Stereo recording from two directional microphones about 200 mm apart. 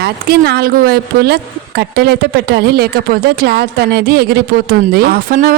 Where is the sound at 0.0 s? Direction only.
55° right (ahead or behind).